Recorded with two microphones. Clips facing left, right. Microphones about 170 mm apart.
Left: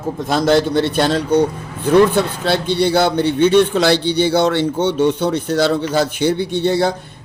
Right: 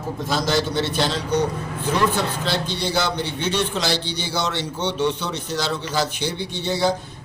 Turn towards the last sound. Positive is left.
turn(degrees=55)  # may be behind; listen again after turning